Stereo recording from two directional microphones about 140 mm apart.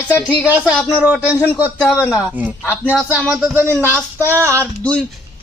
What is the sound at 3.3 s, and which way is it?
Speech, 10° right (ahead or behind).